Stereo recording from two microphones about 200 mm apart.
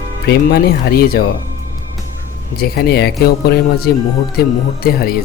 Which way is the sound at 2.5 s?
50° left (ahead or behind).